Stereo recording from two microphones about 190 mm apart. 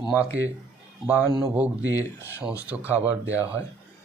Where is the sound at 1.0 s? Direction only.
10° right (ahead or behind).